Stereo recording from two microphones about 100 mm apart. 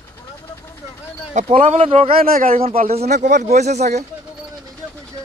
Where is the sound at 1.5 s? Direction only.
90° right.